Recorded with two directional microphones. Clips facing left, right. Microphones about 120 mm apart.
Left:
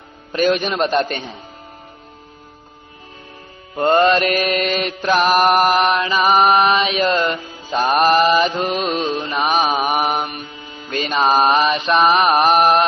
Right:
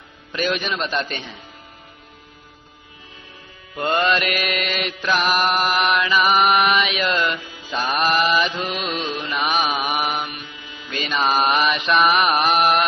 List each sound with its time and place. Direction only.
0.3 s a man's voice: 45° left (ahead or behind)
3.8 s mantra: 40° left (ahead or behind)